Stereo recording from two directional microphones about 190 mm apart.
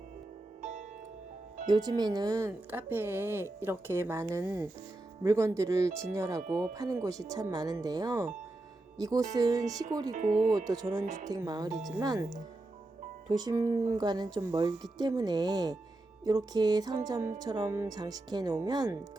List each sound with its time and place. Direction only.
0.6 s music: 40° right (ahead or behind)
1.6 s a woman's voice: 20° right (ahead or behind)
10.2 s speech: 45° right (ahead or behind)
11.3 s a woman's voice: 20° right (ahead or behind)
13.3 s a woman's voice: 20° right (ahead or behind)